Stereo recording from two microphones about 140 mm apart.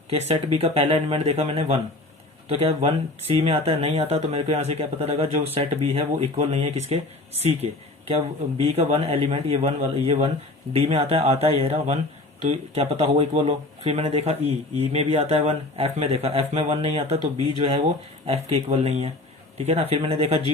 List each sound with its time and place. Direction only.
0.6 s speech: 45° right (ahead or behind)